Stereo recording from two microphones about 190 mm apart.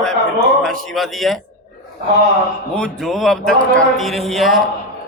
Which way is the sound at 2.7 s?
Centre (ahead or behind).